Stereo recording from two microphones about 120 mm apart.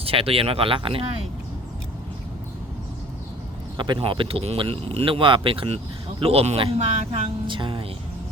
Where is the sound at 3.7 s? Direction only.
40° right (ahead or behind).